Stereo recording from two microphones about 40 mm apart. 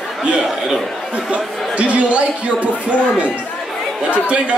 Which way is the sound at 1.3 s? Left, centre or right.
Right.